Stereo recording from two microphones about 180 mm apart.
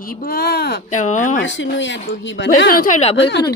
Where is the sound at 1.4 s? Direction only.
90° left.